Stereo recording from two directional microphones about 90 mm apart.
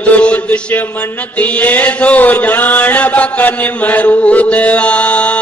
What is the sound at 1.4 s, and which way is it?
Chant, 20° left (ahead or behind).